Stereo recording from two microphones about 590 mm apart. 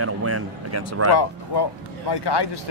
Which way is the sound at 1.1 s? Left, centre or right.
Left.